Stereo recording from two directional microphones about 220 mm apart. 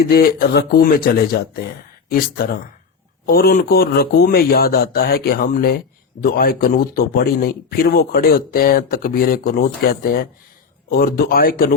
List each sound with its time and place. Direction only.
0.0 s speech: 45° left (ahead or behind)